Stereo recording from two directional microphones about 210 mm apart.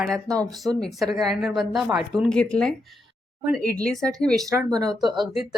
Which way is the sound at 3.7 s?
45° right (ahead or behind).